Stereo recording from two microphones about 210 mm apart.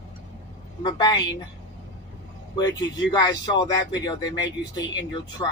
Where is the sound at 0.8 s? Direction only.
20° left (ahead or behind).